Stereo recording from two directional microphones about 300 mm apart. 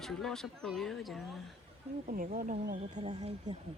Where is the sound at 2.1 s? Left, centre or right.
Right.